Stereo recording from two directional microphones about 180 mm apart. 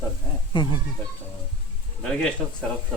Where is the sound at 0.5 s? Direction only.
25° left (ahead or behind).